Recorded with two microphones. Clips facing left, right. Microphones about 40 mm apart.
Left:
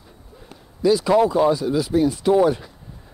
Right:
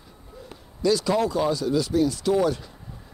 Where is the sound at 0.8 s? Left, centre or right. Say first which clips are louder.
Left 5 dB; centre.